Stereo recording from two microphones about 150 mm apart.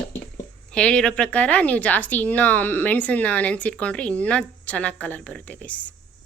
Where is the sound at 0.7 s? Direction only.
5° left (ahead or behind).